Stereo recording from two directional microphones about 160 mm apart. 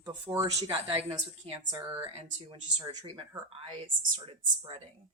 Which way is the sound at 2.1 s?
40° right (ahead or behind).